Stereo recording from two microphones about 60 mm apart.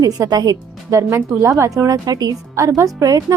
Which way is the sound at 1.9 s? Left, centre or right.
Right.